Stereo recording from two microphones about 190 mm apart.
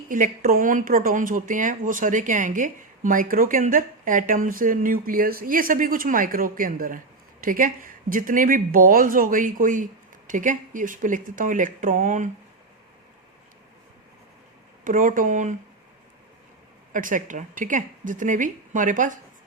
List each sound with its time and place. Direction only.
0.1 s speech: 45° right (ahead or behind)
14.8 s speech: 45° right (ahead or behind)
16.9 s speech: 45° right (ahead or behind)